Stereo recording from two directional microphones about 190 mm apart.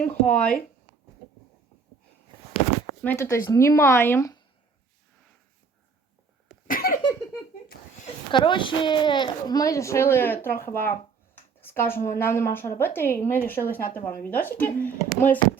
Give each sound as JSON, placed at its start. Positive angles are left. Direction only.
{"t": 0.0, "sound": "speech", "side_deg": 5}
{"t": 3.0, "sound": "a child's voice", "side_deg": 10}
{"t": 6.7, "sound": "a sound", "side_deg": 50}
{"t": 8.3, "sound": "a child's voice", "side_deg": 25}